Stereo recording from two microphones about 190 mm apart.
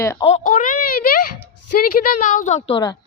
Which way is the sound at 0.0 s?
15° left (ahead or behind).